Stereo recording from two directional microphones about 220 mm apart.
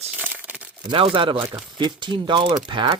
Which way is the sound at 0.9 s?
25° right (ahead or behind).